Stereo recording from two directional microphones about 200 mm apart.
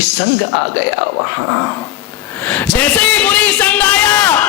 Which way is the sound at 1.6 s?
15° left (ahead or behind).